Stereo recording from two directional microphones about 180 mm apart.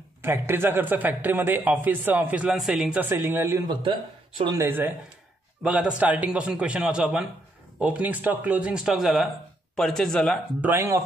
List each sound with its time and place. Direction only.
0.2 s a man's voice: 10° right (ahead or behind)
3.8 s speech: 30° right (ahead or behind)
4.6 s a man's voice: 10° right (ahead or behind)
10.6 s a man's voice: 15° right (ahead or behind)